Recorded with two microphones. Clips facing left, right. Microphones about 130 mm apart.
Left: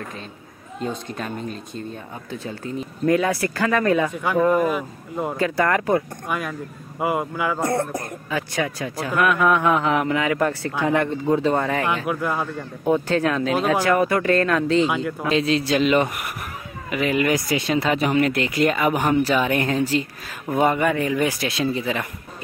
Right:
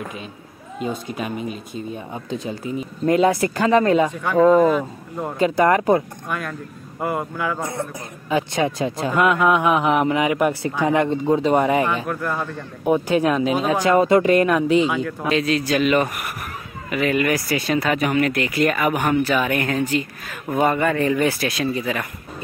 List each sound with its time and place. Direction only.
0.7 s speech: 5° right (ahead or behind); by 4.1 s 25° right (ahead or behind)
4.1 s speech: 10° left (ahead or behind)
5.4 s speech: 20° right (ahead or behind)
6.2 s speech: 5° left (ahead or behind)
7.6 s speech: 65° left (ahead or behind)
8.3 s speech: 20° right (ahead or behind)
12.1 s speech: 10° left (ahead or behind)
12.8 s speech: 15° right (ahead or behind)
15.2 s speech: 25° left (ahead or behind)
20.6 s speech: 15° left (ahead or behind)